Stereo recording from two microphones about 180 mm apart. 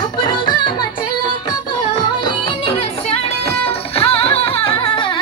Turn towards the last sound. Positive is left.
turn(degrees=30)  # may be behind; listen again after turning